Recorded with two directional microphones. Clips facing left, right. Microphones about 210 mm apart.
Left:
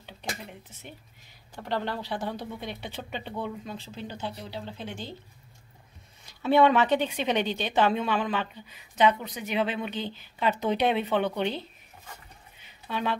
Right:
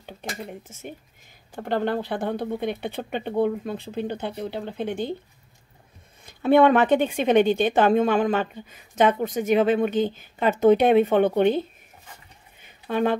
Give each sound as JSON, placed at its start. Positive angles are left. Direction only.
{"t": 0.0, "sound": "a woman's voice", "side_deg": -50}
{"t": 6.2, "sound": "a woman's voice", "side_deg": -50}
{"t": 12.5, "sound": "a sound", "side_deg": -50}